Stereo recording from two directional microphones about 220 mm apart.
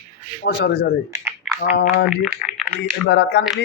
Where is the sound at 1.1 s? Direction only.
15° right (ahead or behind).